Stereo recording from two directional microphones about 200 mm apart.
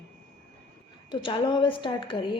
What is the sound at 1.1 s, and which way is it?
A woman's voice, 25° left (ahead or behind).